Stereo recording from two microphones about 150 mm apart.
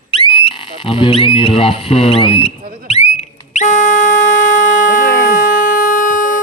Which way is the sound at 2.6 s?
70° right (ahead or behind).